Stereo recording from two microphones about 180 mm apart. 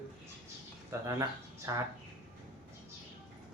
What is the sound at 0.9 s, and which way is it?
Speech, 15° right (ahead or behind).